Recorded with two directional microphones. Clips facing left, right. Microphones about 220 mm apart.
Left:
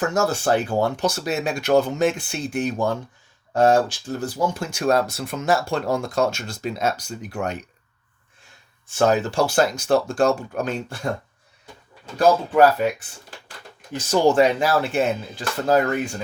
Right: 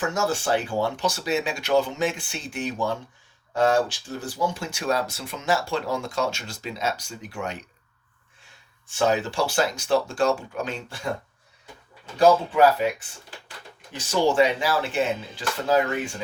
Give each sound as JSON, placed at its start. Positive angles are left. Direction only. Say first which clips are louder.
{"t": 0.1, "sound": "speech", "louder": "left 4 dB", "side_deg": 40}
{"t": 7.3, "sound": "speech", "louder": "left 5 dB", "side_deg": 40}
{"t": 9.0, "sound": "speech", "louder": "left 4 dB", "side_deg": 45}
{"t": 13.9, "sound": "speech", "louder": "left 4 dB", "side_deg": 40}